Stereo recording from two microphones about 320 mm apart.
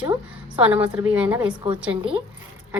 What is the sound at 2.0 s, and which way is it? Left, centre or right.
Speech, centre.